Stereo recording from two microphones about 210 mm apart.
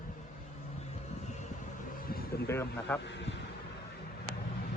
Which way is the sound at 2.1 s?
45° left (ahead or behind).